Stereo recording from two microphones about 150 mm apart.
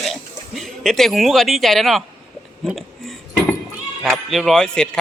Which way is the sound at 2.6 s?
Centre (ahead or behind).